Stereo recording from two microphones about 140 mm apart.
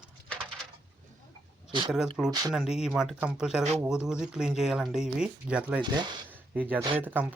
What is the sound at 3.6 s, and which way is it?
Speech, 50° right (ahead or behind).